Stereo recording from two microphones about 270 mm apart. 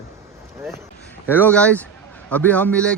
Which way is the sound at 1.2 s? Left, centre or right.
Centre.